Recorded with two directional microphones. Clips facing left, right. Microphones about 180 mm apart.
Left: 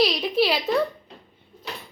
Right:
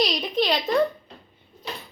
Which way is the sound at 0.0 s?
5° left (ahead or behind).